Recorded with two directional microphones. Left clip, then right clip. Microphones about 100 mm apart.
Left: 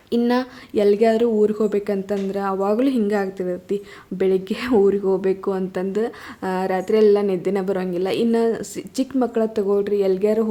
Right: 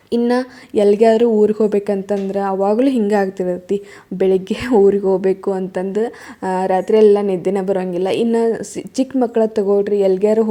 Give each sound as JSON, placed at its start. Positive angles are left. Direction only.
{"t": 0.3, "sound": "speech", "side_deg": -30}
{"t": 5.5, "sound": "a woman's voice", "side_deg": -25}